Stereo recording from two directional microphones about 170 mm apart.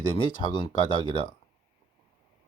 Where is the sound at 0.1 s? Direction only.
30° left (ahead or behind).